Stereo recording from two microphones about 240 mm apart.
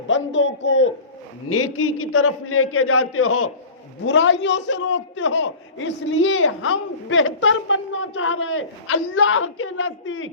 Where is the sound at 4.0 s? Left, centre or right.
Left.